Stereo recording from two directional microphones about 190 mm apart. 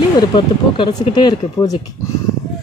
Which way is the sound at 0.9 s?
20° left (ahead or behind).